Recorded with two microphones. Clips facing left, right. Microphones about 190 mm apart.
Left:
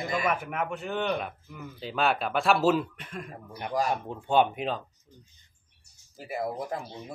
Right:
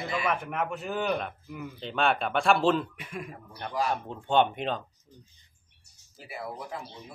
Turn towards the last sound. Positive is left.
turn(degrees=45)  # may be behind; listen again after turning